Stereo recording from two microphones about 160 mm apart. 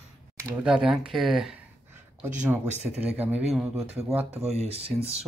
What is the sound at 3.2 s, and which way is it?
Speech, 10° right (ahead or behind).